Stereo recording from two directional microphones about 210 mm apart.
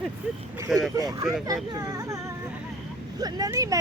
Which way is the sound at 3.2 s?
15° right (ahead or behind).